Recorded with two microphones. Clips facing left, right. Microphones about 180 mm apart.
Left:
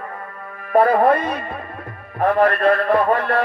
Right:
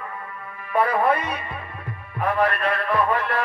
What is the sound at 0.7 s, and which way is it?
Music, 45° left (ahead or behind).